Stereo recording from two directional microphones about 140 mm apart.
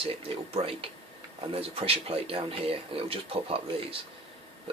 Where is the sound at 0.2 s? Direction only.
45° right (ahead or behind).